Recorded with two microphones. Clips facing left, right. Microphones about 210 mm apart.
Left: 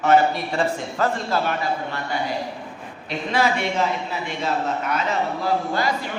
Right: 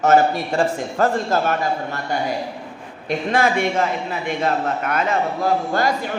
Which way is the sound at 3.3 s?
50° right (ahead or behind).